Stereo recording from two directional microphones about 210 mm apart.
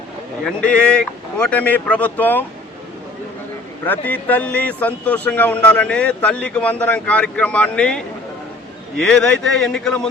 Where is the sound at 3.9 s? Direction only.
10° left (ahead or behind).